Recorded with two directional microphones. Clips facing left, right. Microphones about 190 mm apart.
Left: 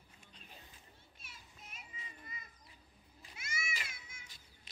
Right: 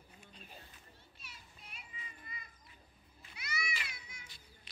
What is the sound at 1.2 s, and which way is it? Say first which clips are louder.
Children playing: left 1 dB; 45° left (ahead or behind).